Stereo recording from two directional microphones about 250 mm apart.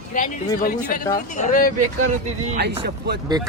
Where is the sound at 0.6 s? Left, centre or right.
Left.